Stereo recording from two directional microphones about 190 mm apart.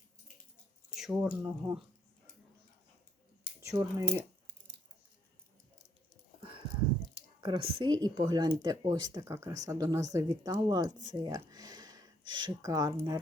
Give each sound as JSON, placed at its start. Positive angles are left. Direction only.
{"t": 0.9, "sound": "speech", "side_deg": -5}
{"t": 3.6, "sound": "speech", "side_deg": -15}
{"t": 7.1, "sound": "squish", "side_deg": -25}
{"t": 8.0, "sound": "speech", "side_deg": -20}
{"t": 11.1, "sound": "a sound", "side_deg": -20}